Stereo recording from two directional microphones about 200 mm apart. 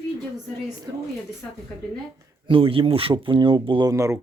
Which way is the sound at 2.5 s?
25° right (ahead or behind).